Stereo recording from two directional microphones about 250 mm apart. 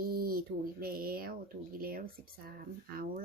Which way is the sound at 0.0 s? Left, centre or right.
Right.